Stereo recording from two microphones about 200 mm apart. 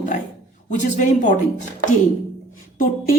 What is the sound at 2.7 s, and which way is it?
Speech, 45° left (ahead or behind).